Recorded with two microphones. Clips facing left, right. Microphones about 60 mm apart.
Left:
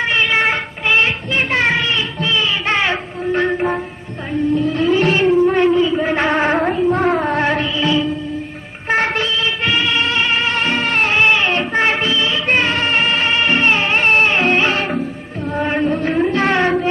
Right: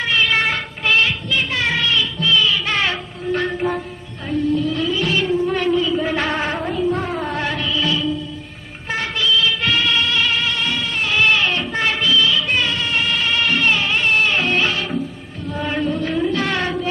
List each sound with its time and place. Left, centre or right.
0.0 s child singing: left
4.3 s a sound: left
6.3 s a sound: left
6.9 s music: left
7.2 s music: left
8.8 s music: left
11.1 s music: left
15.5 s chant: left